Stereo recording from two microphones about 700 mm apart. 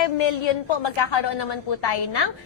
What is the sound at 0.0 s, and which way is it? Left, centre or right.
A woman's voice, left.